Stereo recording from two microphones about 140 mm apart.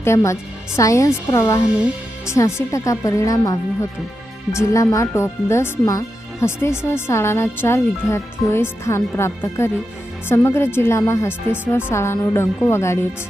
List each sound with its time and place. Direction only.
0.0 s speech: 20° left (ahead or behind)